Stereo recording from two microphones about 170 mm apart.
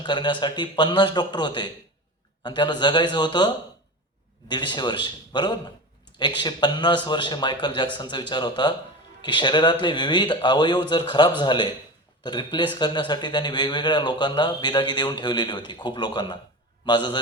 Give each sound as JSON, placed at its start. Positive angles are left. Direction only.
{"t": 0.0, "sound": "a man's voice", "side_deg": 25}